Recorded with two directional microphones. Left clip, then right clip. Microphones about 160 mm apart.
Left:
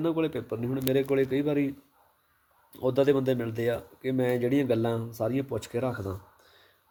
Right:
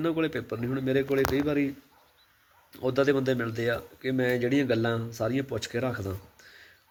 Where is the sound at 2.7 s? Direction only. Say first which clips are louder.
Left 1 dB; 25° left (ahead or behind).